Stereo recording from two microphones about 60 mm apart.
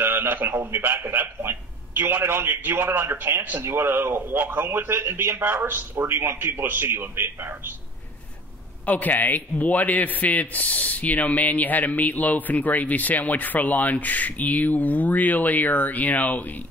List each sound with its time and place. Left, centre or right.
0.0 s speech: right
8.8 s a man's voice: left